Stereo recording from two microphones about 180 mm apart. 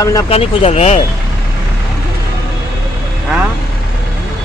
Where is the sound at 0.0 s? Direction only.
20° left (ahead or behind).